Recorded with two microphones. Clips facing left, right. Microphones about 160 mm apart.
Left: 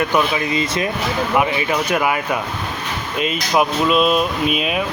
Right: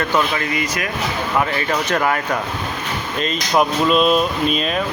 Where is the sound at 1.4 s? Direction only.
10° left (ahead or behind).